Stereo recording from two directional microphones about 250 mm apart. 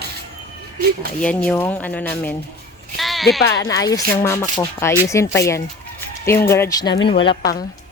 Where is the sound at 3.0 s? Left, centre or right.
Centre.